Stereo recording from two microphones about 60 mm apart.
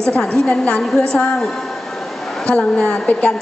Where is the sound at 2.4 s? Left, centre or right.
Centre.